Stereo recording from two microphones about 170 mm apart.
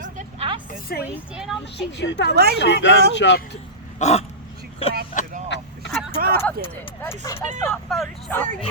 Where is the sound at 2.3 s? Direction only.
70° right (ahead or behind).